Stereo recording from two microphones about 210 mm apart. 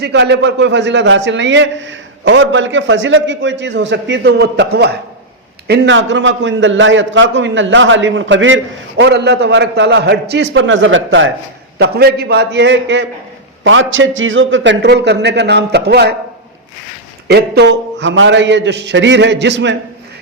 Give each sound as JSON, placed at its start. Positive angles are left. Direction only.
{"t": 0.0, "sound": "a man's voice", "side_deg": -55}
{"t": 11.8, "sound": "a man's voice", "side_deg": -50}
{"t": 17.2, "sound": "a man's voice", "side_deg": -50}